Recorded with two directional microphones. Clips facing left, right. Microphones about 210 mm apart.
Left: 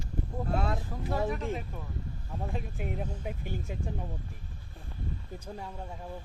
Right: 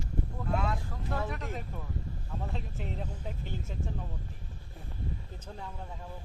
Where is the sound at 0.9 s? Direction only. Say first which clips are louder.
Left 4 dB; 15° left (ahead or behind).